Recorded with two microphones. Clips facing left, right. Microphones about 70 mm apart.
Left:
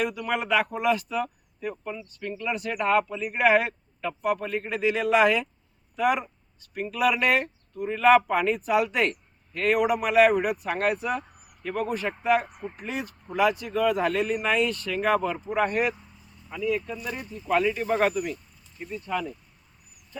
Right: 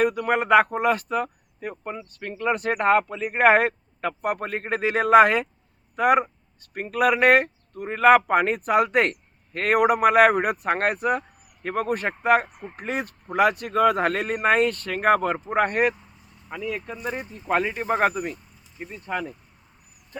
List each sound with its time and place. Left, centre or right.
0.0 s speech: right